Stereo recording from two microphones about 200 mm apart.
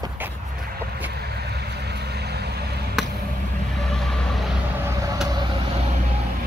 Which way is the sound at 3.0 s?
Centre (ahead or behind).